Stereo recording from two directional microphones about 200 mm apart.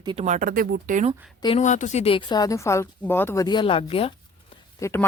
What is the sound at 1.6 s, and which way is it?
Speech, 35° left (ahead or behind).